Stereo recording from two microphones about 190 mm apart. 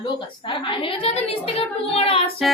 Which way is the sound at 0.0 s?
25° left (ahead or behind).